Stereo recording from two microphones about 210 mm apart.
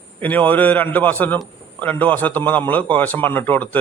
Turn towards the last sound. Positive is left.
turn(degrees=10)  # may be behind; listen again after turning